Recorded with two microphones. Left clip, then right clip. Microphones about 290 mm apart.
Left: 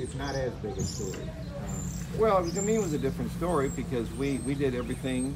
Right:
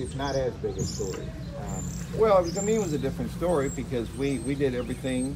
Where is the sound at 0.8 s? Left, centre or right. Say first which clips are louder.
Right 3 dB; right.